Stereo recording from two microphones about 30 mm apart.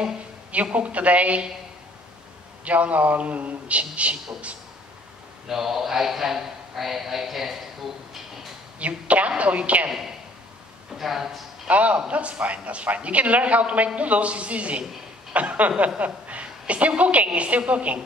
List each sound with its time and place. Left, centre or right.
0.7 s a woman's voice: right
2.6 s a woman's voice: right
5.5 s a man's voice: centre
8.7 s a woman's voice: right
9.8 s a man's voice: centre
11.6 s a man's voice: right
17.7 s a woman's voice: right